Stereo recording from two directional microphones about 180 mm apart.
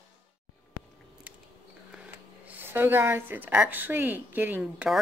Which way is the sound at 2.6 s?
10° right (ahead or behind).